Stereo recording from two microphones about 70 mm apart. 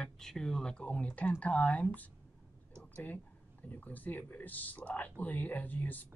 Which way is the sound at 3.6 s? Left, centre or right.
Left.